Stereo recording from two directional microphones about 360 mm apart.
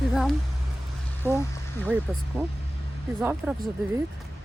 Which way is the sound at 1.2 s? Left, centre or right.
Centre.